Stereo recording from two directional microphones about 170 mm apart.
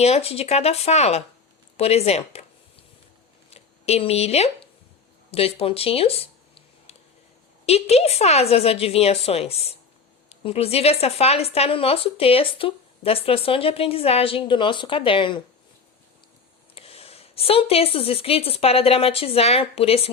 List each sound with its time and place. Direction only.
0.0 s speech: 35° left (ahead or behind)
3.5 s speech: 40° left (ahead or behind)
5.3 s a sound: 35° left (ahead or behind)
7.6 s speech: 40° left (ahead or behind)
16.7 s a woman's voice: 35° left (ahead or behind)